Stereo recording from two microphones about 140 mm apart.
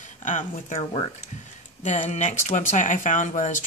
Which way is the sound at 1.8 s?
55° left (ahead or behind).